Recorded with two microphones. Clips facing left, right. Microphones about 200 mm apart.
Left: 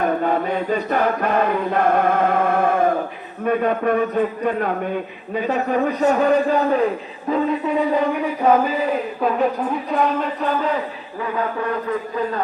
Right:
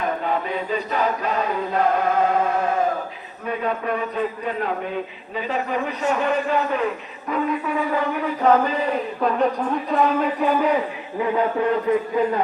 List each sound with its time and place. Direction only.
0.0 s chant: 50° left (ahead or behind)
3.4 s a man's voice: 55° left (ahead or behind); by 10.7 s 10° right (ahead or behind)
11.2 s a man's voice: 20° right (ahead or behind)